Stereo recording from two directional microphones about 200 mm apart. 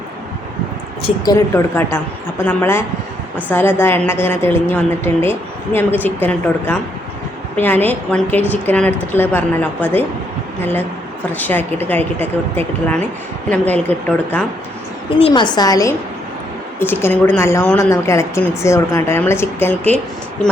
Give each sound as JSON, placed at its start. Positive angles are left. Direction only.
{"t": 1.0, "sound": "a woman's voice", "side_deg": 20}
{"t": 11.3, "sound": "a woman's voice", "side_deg": 10}
{"t": 15.2, "sound": "a woman's voice", "side_deg": 25}